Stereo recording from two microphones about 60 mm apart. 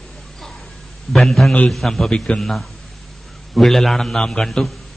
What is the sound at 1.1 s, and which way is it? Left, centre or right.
A man's voice, centre.